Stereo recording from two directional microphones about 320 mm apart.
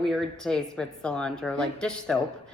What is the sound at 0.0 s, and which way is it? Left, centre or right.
A woman's voice, centre.